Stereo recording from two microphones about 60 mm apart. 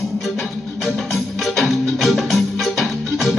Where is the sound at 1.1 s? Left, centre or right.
Centre.